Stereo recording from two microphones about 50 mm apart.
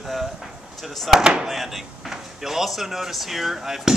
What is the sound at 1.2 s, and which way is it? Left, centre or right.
Speech, centre.